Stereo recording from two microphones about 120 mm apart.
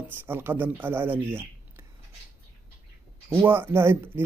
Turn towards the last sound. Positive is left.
turn(degrees=-20)  # may be behind; listen again after turning